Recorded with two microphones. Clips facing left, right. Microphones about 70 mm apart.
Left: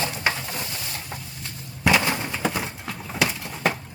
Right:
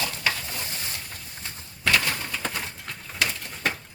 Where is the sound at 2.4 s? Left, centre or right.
Centre.